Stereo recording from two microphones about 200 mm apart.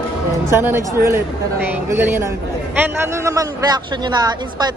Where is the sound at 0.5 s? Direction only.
10° right (ahead or behind).